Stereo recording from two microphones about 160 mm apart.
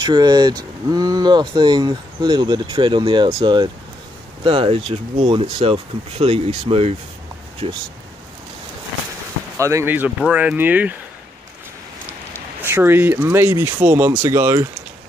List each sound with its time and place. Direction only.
0.0 s speech: 25° right (ahead or behind)
9.6 s speech: 20° right (ahead or behind)
12.6 s speech: 15° right (ahead or behind)